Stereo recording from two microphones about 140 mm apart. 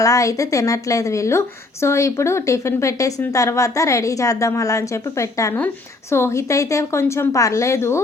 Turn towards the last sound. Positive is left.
turn(degrees=20)  # may be behind; listen again after turning